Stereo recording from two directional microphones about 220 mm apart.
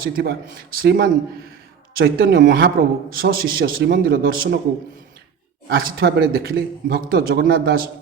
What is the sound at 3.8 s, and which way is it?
Speech, 45° right (ahead or behind).